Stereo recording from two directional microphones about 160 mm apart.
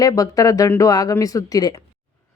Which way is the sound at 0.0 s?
25° left (ahead or behind).